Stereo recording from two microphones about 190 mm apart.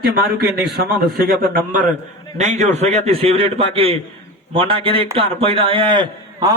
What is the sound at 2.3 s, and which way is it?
A man's voice, 35° right (ahead or behind).